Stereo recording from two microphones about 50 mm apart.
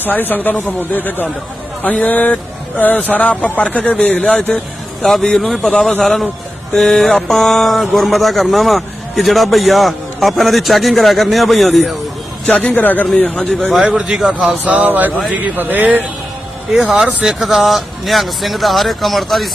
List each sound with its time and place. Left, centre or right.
0.0 s a man's voice: left; by 11.9 s centre
12.5 s speech: left
13.1 s a man's voice: centre
13.9 s a man's voice: centre
14.7 s speech: right
17.2 s speech: centre